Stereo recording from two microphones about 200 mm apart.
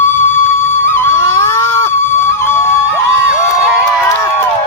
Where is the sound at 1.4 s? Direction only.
10° left (ahead or behind).